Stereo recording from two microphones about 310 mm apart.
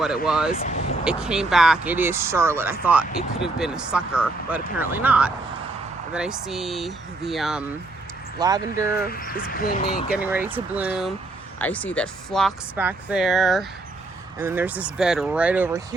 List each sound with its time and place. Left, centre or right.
0.3 s speech: centre
0.5 s speech: left
1.0 s speech: centre
8.4 s speech: centre
9.0 s speech: left
10.1 s speech: centre